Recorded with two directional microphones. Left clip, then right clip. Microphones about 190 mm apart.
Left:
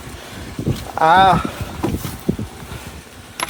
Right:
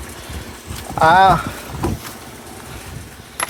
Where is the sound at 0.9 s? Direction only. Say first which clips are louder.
Right 1 dB; 50° left (ahead or behind).